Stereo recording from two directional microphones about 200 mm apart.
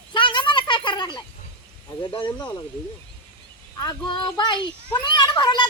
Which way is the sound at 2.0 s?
25° left (ahead or behind).